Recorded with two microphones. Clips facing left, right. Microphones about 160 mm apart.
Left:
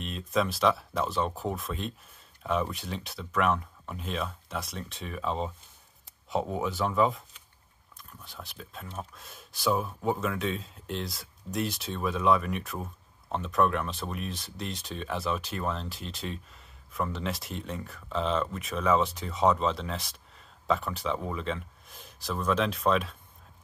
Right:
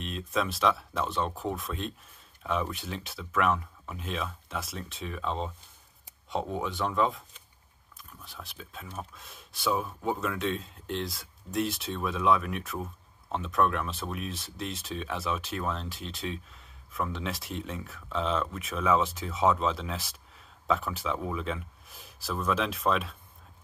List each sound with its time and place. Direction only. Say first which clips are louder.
0.0 s speech: left 2 dB; centre (ahead or behind)